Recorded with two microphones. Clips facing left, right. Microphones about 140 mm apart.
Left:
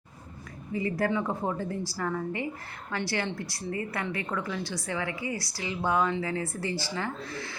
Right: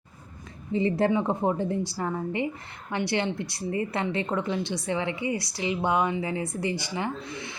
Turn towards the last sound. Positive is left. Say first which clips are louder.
# right 2 dB
turn(degrees=-20)  # may be behind; listen again after turning